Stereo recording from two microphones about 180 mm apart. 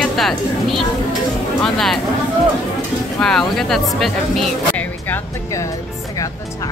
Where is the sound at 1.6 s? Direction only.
Centre (ahead or behind).